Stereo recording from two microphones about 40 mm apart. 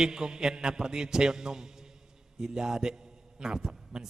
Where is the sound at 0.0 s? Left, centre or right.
Centre.